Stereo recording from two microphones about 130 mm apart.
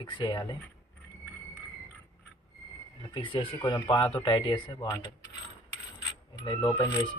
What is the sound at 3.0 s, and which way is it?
Speech, 40° left (ahead or behind).